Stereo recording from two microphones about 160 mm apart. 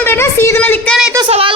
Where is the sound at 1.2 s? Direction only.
35° right (ahead or behind).